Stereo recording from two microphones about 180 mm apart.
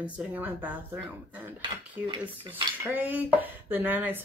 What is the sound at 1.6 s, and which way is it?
Cutlery, 25° right (ahead or behind).